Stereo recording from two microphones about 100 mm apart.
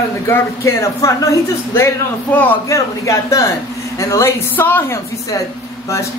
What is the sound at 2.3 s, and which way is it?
Speech, 15° left (ahead or behind).